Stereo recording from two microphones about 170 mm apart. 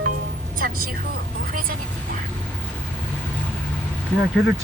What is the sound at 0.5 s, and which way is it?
Speech, 60° right (ahead or behind).